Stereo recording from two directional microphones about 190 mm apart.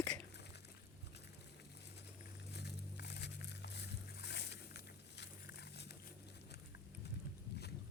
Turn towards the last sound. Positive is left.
turn(degrees=60)  # may be behind; listen again after turning